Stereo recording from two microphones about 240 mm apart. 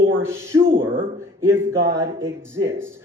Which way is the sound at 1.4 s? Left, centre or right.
Centre.